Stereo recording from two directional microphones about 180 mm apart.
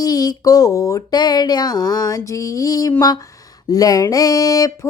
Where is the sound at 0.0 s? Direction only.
20° left (ahead or behind).